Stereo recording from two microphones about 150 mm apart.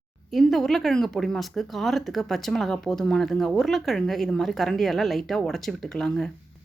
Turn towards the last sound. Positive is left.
turn(degrees=5)  # may be behind; listen again after turning